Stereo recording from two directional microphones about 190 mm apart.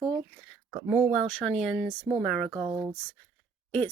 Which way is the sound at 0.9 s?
10° right (ahead or behind).